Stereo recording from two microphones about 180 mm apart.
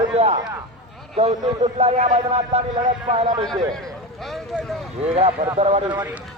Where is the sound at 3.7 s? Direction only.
Centre (ahead or behind).